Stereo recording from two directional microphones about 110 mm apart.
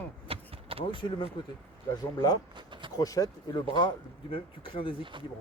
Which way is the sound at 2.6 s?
45° right (ahead or behind).